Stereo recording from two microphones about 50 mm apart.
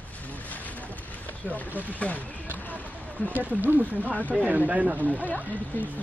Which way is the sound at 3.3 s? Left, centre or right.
Right.